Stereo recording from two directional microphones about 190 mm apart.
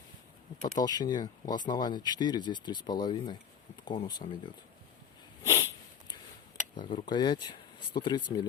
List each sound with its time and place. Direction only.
0.8 s speech: 20° left (ahead or behind)
5.4 s sniff: 15° left (ahead or behind)
6.8 s speech: 25° left (ahead or behind)